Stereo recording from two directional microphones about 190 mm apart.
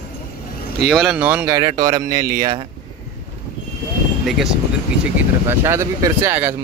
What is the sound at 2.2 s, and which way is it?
Speech, 55° right (ahead or behind).